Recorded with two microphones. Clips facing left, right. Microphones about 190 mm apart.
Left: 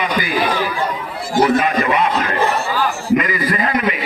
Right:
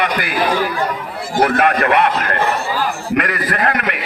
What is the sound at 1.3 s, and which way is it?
A man's voice, 60° right (ahead or behind).